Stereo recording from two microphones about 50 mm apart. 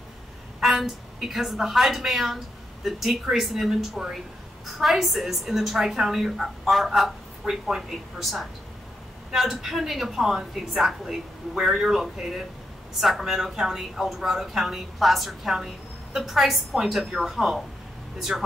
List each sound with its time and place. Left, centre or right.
0.6 s a woman's voice: centre